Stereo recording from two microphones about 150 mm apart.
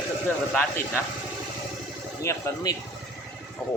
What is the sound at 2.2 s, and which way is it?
Speech, 20° left (ahead or behind).